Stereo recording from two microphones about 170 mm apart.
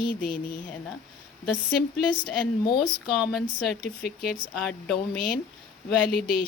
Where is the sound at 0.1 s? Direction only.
55° left (ahead or behind).